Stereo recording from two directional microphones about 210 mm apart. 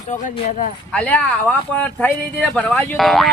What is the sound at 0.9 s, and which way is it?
Speech, 5° left (ahead or behind).